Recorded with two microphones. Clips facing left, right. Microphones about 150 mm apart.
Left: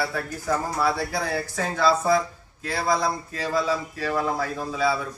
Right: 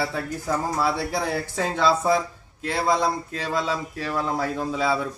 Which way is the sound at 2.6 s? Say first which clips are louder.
Right 2 dB; 25° right (ahead or behind).